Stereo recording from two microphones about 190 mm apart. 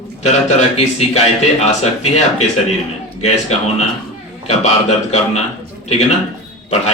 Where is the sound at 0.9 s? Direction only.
35° left (ahead or behind).